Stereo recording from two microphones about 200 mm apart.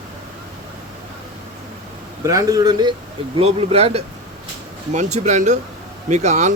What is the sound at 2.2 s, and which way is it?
A man's voice, 15° right (ahead or behind).